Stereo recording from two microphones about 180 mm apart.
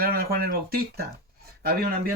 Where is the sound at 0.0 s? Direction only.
55° right (ahead or behind).